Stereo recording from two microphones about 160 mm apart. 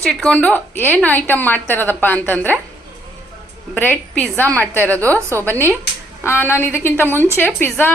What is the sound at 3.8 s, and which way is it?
A woman's voice, 10° left (ahead or behind).